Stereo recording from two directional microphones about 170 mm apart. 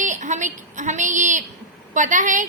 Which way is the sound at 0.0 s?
45° right (ahead or behind).